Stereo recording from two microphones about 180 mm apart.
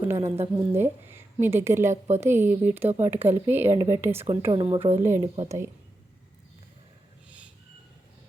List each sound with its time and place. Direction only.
0.3 s a woman's voice: 15° right (ahead or behind)
4.5 s a woman's voice: 30° right (ahead or behind)
4.9 s a woman's voice: 15° right (ahead or behind)
7.3 s a sound: 5° right (ahead or behind)